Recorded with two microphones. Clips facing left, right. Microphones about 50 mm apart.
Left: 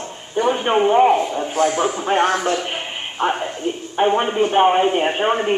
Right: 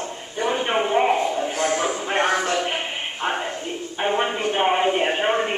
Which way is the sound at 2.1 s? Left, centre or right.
Centre.